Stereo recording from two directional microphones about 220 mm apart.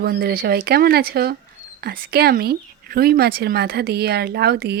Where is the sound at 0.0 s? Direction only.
45° right (ahead or behind).